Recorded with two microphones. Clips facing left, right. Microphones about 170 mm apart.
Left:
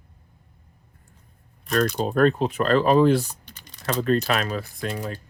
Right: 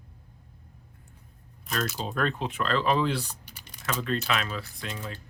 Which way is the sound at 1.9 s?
50° left (ahead or behind).